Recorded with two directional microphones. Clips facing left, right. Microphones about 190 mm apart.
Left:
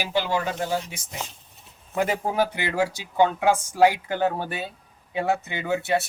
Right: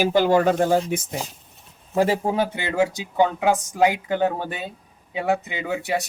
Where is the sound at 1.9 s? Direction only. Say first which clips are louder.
Right 3 dB; 30° right (ahead or behind).